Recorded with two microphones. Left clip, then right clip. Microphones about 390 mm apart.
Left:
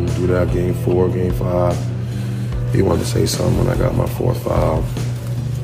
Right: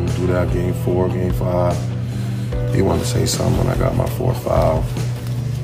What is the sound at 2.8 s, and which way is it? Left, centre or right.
Speech, centre.